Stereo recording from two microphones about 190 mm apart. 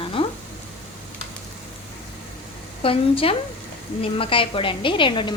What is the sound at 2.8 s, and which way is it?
A woman's voice, 30° left (ahead or behind).